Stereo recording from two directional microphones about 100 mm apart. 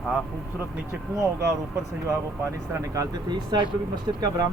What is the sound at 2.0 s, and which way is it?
Speech, 30° right (ahead or behind).